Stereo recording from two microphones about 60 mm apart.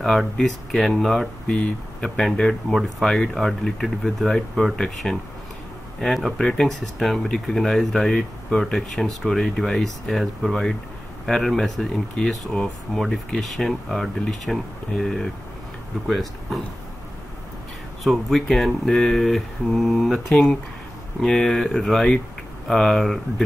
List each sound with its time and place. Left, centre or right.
0.0 s speech: centre
1.5 s speech: left
2.0 s speech: centre
5.9 s speech: centre
18.0 s speech: centre